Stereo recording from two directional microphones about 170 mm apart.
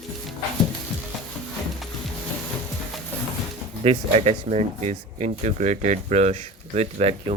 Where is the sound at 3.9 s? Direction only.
35° right (ahead or behind).